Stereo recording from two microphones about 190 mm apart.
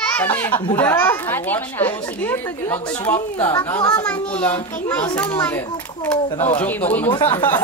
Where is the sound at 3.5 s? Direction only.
20° left (ahead or behind).